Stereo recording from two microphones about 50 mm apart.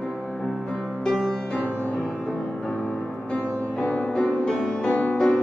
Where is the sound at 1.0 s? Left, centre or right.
Centre.